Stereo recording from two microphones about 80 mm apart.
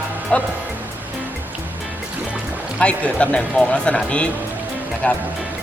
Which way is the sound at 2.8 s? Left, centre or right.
Centre.